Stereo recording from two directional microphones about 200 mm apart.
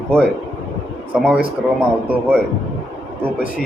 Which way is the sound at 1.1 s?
5° right (ahead or behind).